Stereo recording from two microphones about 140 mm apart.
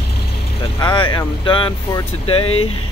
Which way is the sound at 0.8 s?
35° left (ahead or behind).